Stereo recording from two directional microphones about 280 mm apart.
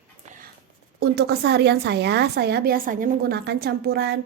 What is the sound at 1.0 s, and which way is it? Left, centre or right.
Speech, right.